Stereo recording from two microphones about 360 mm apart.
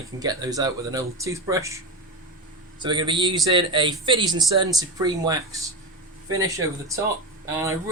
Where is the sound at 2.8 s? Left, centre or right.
Centre.